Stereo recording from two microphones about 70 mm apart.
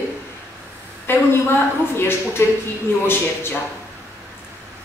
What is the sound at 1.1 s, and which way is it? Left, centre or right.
A woman's voice, left.